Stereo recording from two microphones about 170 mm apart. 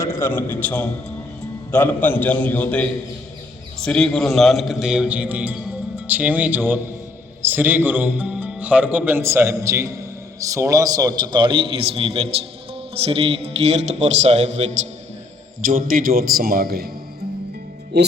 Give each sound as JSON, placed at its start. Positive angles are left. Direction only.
{"t": 0.2, "sound": "a man's voice", "side_deg": 10}
{"t": 15.6, "sound": "a man's voice", "side_deg": -55}
{"t": 17.9, "sound": "speech", "side_deg": -80}